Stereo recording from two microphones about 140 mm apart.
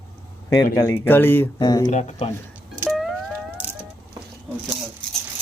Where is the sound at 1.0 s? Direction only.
15° left (ahead or behind).